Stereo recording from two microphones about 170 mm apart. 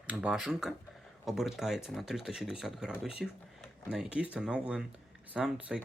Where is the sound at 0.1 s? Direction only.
5° right (ahead or behind).